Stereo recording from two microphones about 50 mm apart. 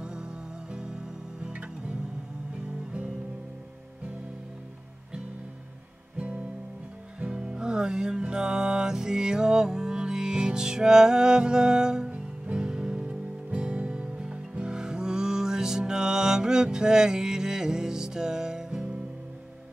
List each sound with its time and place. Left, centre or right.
0.0 s music: centre
6.1 s music: right